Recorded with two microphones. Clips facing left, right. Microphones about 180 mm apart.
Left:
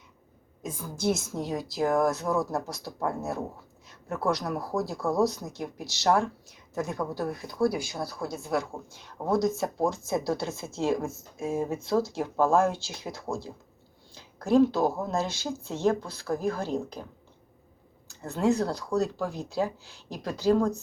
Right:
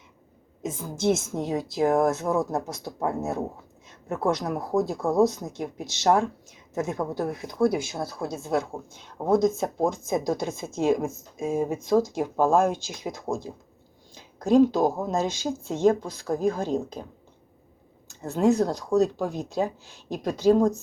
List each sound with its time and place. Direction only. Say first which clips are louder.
0.6 s a woman's voice: right 4 dB; 25° right (ahead or behind)
18.1 s a woman's voice: right 4 dB; 20° right (ahead or behind)